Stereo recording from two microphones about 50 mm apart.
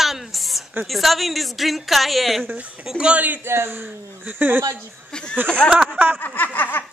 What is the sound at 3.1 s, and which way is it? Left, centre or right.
Speech, right.